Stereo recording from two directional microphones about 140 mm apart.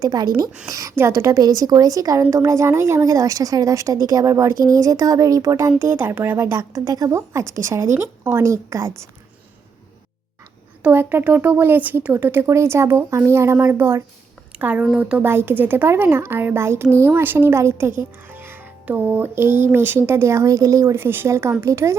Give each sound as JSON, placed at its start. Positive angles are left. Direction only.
{"t": 0.0, "sound": "speech", "side_deg": -30}
{"t": 10.8, "sound": "speech", "side_deg": -10}